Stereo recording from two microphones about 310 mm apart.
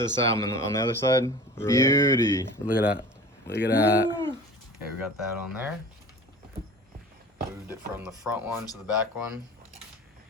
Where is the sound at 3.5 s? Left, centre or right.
Left.